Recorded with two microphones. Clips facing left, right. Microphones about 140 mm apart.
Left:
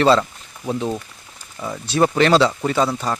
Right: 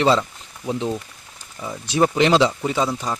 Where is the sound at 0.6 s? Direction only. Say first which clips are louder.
Left 1 dB; 15° left (ahead or behind).